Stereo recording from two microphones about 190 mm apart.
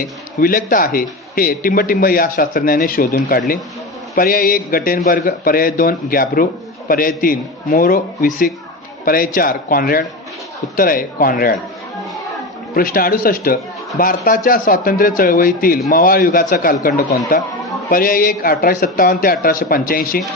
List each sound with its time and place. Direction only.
0.3 s a man's voice: 50° left (ahead or behind)
12.7 s a man's voice: 50° left (ahead or behind)